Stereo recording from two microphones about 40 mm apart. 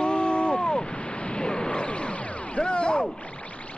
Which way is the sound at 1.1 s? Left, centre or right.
Left.